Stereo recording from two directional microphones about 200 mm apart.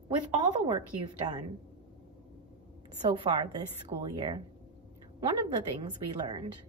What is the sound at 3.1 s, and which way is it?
Speech, 25° right (ahead or behind).